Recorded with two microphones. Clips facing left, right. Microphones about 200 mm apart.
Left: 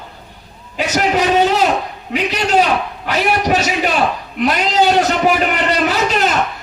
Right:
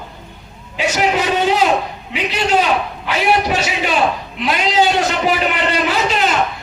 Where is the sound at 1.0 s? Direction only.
45° left (ahead or behind).